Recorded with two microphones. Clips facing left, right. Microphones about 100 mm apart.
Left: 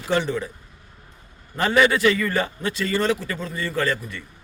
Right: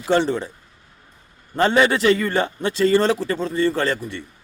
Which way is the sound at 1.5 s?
30° right (ahead or behind).